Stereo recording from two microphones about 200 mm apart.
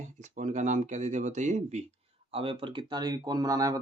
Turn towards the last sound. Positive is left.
turn(degrees=-15)  # may be behind; listen again after turning